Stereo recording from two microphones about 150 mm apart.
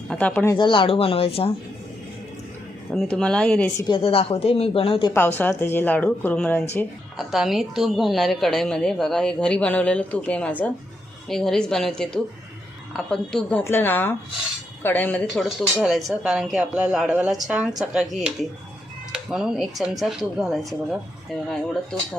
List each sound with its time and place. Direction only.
0.1 s a woman's voice: 10° left (ahead or behind)
0.5 s a woman's voice: 35° left (ahead or behind)
2.9 s a woman's voice: 5° left (ahead or behind)
3.8 s a woman's voice: 30° left (ahead or behind)
5.1 s a woman's voice: 15° left (ahead or behind)
15.4 s a woman's voice: centre (ahead or behind)